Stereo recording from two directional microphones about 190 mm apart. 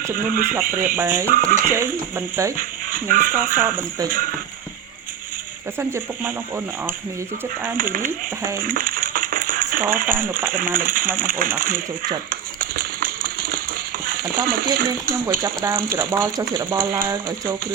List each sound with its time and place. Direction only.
0.1 s speech: 45° right (ahead or behind)
0.9 s speech: 10° right (ahead or behind)
1.3 s speech: 45° right (ahead or behind)
2.1 s speech: 10° right (ahead or behind)
2.6 s speech: 45° right (ahead or behind)
7.8 s speech: 45° right (ahead or behind)
8.6 s a sound: 45° right (ahead or behind)
10.3 s speech: 45° right (ahead or behind)
11.2 s a sound: 45° right (ahead or behind)
14.4 s speech: 50° right (ahead or behind)
15.4 s speech: 15° right (ahead or behind)